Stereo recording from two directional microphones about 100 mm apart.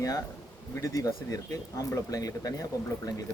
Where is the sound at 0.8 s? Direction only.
35° left (ahead or behind).